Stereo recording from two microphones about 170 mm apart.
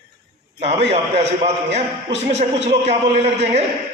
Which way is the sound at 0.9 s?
40° right (ahead or behind).